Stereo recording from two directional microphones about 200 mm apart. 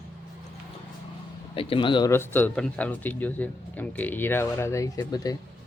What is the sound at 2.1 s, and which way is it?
Speech, 10° left (ahead or behind).